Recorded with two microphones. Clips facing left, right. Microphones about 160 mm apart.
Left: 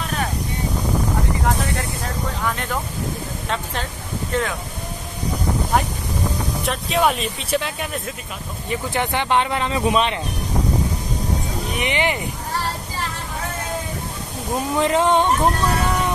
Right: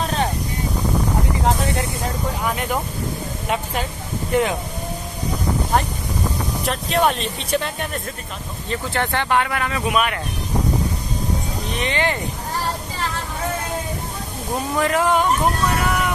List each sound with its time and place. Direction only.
0.0 s vehicle: 30° right (ahead or behind)
2.4 s speech: 15° right (ahead or behind)
4.3 s speech: 20° right (ahead or behind)
6.6 s speech: centre (ahead or behind)
8.6 s speech: 15° left (ahead or behind)
11.7 s speech: 15° left (ahead or behind)
14.8 s speech: 25° left (ahead or behind)